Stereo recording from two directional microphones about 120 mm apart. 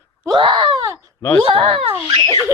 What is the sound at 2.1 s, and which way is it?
Speech, 30° left (ahead or behind).